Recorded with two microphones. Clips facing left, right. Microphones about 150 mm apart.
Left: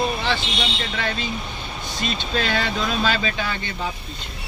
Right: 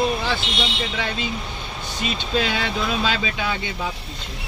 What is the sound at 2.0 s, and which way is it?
Speech, 10° right (ahead or behind).